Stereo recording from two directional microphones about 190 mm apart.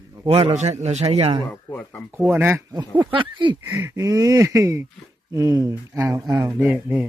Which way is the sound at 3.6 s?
15° right (ahead or behind).